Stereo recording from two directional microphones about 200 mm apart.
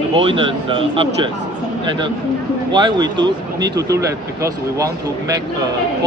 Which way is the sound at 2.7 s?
20° right (ahead or behind).